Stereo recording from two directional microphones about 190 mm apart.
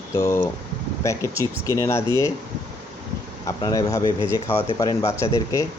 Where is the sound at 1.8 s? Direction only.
15° left (ahead or behind).